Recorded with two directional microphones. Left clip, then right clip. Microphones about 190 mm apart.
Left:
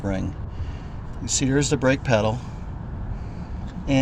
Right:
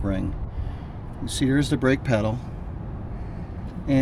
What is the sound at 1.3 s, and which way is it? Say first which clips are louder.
Speech: left 2 dB; centre (ahead or behind).